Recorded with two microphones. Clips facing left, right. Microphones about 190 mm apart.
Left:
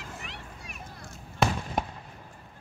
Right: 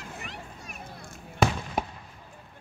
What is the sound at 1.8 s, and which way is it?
Fireworks, centre (ahead or behind).